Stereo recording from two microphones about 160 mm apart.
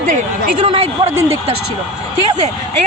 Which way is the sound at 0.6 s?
35° right (ahead or behind).